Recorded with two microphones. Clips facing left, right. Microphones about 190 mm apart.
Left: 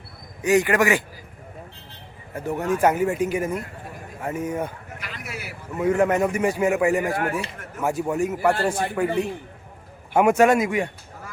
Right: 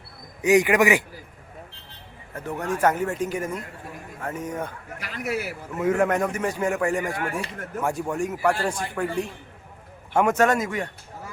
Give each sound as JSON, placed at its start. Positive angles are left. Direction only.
{"t": 0.4, "sound": "speech", "side_deg": -15}
{"t": 2.3, "sound": "a man's voice", "side_deg": 10}
{"t": 4.9, "sound": "a sound", "side_deg": -40}
{"t": 5.7, "sound": "a man's voice", "side_deg": 0}
{"t": 7.1, "sound": "speech", "side_deg": 50}
{"t": 7.9, "sound": "a man's voice", "side_deg": 5}